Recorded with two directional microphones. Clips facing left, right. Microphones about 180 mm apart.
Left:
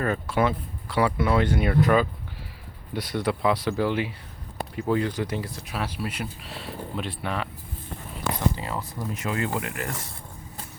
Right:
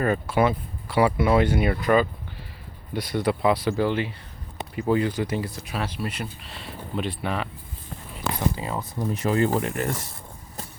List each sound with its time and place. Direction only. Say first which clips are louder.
0.0 s speech: right 2 dB; 10° right (ahead or behind)
8.5 s speech: right 2 dB; 15° right (ahead or behind)
9.2 s speech: right 6 dB; 35° right (ahead or behind)